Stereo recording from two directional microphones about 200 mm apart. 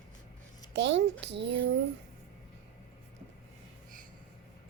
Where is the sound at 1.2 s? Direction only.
60° right (ahead or behind).